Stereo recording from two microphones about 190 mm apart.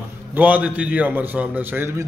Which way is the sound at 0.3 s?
10° right (ahead or behind).